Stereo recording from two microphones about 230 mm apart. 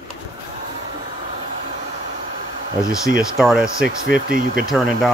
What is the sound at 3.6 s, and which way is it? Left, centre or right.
Speech, right.